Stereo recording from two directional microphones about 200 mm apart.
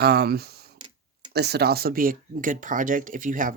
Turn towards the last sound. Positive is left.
turn(degrees=-40)  # may be behind; listen again after turning